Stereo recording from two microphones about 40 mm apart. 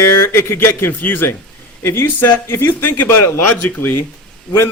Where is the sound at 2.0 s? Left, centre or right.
Left.